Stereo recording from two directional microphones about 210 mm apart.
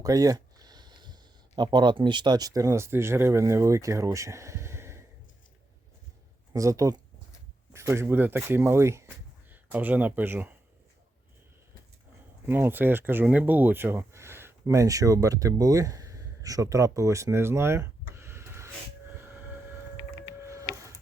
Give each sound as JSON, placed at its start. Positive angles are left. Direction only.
{"t": 0.0, "sound": "speech", "side_deg": -15}
{"t": 6.5, "sound": "speech", "side_deg": -15}
{"t": 12.5, "sound": "speech", "side_deg": -10}
{"t": 20.4, "sound": "printer", "side_deg": -15}